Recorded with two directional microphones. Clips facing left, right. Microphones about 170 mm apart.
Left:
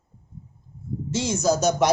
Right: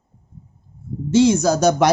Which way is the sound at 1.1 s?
70° right (ahead or behind).